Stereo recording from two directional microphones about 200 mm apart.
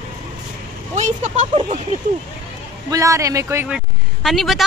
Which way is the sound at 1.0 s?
35° right (ahead or behind).